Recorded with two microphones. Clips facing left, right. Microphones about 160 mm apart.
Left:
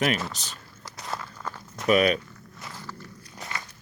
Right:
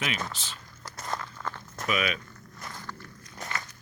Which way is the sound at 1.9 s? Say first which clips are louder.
Left 9 dB; 40° left (ahead or behind).